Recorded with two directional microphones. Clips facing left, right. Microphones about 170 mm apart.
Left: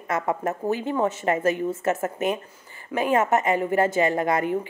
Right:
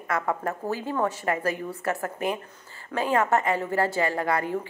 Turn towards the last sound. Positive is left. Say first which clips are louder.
# left 3 dB
turn(degrees=20)  # may be behind; listen again after turning